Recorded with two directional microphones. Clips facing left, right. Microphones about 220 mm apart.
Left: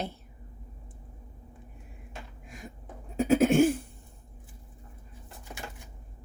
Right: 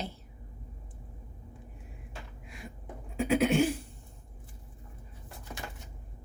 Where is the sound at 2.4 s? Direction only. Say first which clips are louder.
Even; 45° left (ahead or behind).